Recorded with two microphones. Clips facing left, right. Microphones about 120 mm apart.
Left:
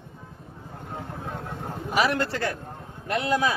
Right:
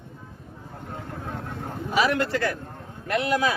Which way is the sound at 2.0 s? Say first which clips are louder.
Right 2 dB; 35° left (ahead or behind).